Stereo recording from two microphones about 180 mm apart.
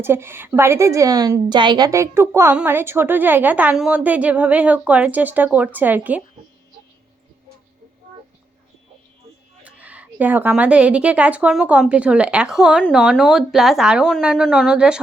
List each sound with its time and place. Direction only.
0.0 s a woman's voice: 15° right (ahead or behind)
9.6 s a woman's voice: 10° right (ahead or behind)